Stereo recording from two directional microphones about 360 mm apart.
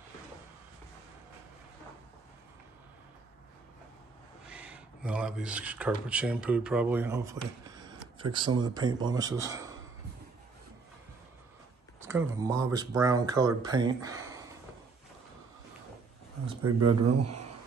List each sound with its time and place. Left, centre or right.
4.5 s speech: centre
12.0 s speech: centre
16.6 s speech: right